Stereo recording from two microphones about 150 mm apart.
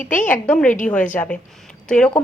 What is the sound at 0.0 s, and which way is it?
Speech, 60° left (ahead or behind).